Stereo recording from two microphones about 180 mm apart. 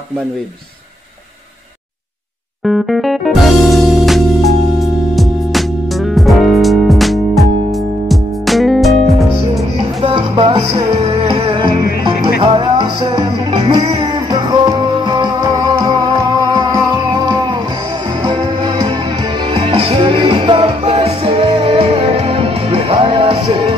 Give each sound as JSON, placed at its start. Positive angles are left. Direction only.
{"t": 2.6, "sound": "music", "side_deg": 0}
{"t": 9.8, "sound": "music", "side_deg": -30}